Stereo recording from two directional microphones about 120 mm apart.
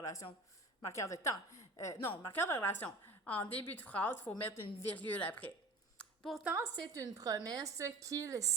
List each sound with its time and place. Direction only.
0.0 s a woman's voice: 25° left (ahead or behind)
6.0 s a sound: 5° left (ahead or behind)
6.4 s a woman's voice: 20° right (ahead or behind)
6.7 s a woman's voice: 30° right (ahead or behind)